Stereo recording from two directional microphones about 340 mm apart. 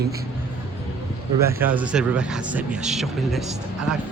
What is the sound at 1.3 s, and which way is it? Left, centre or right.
Speech, centre.